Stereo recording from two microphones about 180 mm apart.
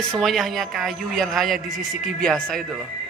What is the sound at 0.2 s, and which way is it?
A man's voice, centre (ahead or behind).